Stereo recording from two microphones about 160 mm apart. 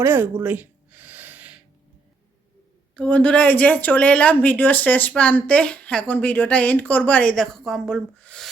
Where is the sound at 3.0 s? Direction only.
10° left (ahead or behind).